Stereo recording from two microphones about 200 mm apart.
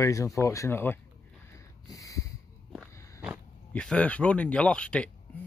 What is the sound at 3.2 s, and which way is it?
Speech, centre (ahead or behind).